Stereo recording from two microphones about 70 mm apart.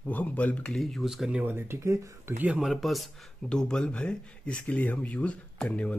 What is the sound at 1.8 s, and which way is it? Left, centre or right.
Speech, right.